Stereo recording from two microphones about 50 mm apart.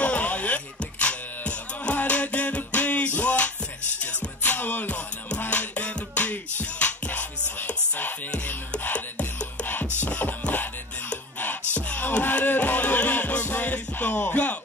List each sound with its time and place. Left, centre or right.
0.0 s music: left
4.5 s music: left
4.8 s music: left
10.0 s music: left